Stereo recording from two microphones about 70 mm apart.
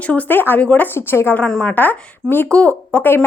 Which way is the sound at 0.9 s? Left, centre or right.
Left.